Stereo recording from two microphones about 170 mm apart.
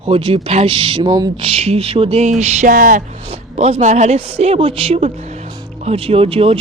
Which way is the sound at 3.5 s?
40° right (ahead or behind).